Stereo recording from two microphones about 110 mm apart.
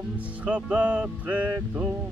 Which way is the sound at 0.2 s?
15° right (ahead or behind).